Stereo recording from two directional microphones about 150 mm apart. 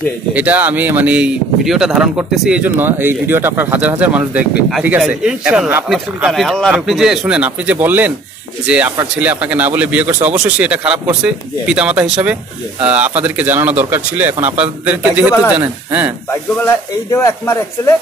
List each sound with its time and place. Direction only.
0.3 s speech: 10° right (ahead or behind)
17.1 s speech: 20° left (ahead or behind)